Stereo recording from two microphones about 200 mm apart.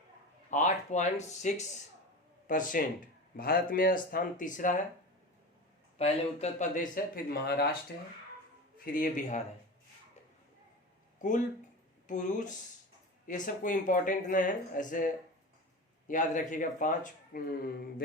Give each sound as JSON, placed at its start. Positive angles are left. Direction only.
{"t": 0.5, "sound": "speech", "side_deg": 35}
{"t": 6.0, "sound": "speech", "side_deg": 35}
{"t": 7.4, "sound": "speech", "side_deg": 50}
{"t": 8.8, "sound": "speech", "side_deg": 40}
{"t": 11.2, "sound": "speech", "side_deg": 40}
{"t": 16.0, "sound": "speech", "side_deg": 40}